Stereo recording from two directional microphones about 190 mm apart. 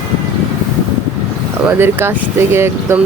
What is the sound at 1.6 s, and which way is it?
Speech, 10° right (ahead or behind).